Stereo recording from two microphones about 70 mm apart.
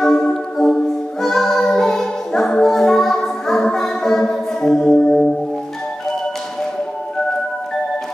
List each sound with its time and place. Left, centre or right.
0.0 s music: centre